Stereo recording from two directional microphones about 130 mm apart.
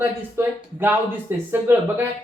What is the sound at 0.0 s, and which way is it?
Speech, 20° right (ahead or behind).